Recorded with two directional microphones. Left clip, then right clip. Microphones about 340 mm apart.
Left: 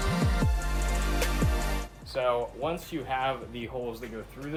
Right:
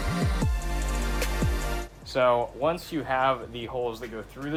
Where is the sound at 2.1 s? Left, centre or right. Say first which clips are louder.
Right 5 dB; right.